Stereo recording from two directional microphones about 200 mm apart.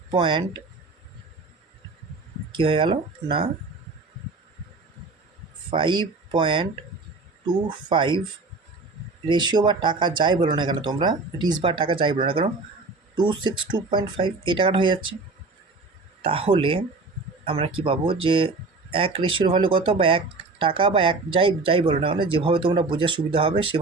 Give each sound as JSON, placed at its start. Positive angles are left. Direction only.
{"t": 0.1, "sound": "speech", "side_deg": -25}
{"t": 2.5, "sound": "speech", "side_deg": -25}
{"t": 5.7, "sound": "speech", "side_deg": -25}
{"t": 9.2, "sound": "speech", "side_deg": -20}
{"t": 16.2, "sound": "speech", "side_deg": -25}